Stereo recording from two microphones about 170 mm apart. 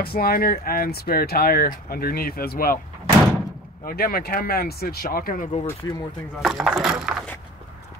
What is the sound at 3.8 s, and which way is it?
Speech, 60° left (ahead or behind).